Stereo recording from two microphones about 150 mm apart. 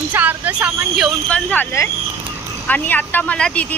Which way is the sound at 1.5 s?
20° left (ahead or behind).